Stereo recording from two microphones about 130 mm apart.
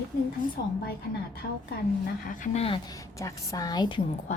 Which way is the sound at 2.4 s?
60° left (ahead or behind).